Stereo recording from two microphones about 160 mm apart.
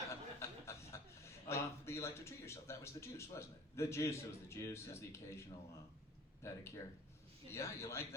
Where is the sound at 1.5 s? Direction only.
15° left (ahead or behind).